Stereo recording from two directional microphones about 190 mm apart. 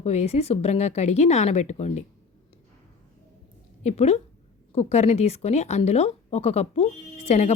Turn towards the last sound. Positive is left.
turn(degrees=35)  # may be behind; listen again after turning